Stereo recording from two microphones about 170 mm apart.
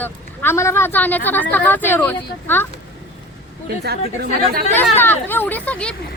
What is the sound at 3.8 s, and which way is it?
Speech, 65° right (ahead or behind).